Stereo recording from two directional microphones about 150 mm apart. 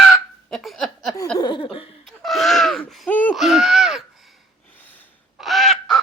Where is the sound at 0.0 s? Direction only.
Centre (ahead or behind).